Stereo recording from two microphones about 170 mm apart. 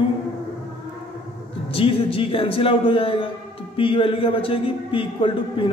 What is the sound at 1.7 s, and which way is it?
A man's voice, 35° left (ahead or behind).